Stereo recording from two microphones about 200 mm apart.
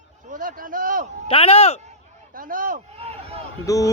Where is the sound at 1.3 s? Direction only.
30° left (ahead or behind).